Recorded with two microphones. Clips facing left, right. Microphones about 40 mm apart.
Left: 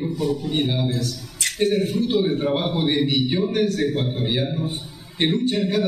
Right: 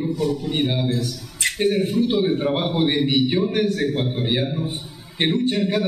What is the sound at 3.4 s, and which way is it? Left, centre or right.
Speech, right.